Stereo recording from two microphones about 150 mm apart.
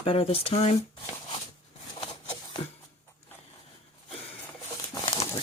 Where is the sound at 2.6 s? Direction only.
45° left (ahead or behind).